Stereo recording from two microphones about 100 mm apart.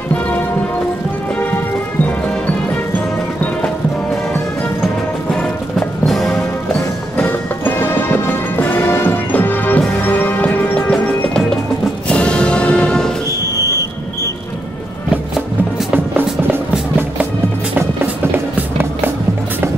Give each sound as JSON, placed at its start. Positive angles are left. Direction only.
{"t": 2.0, "sound": "music", "side_deg": 15}
{"t": 5.3, "sound": "music", "side_deg": 5}
{"t": 7.2, "sound": "music", "side_deg": 20}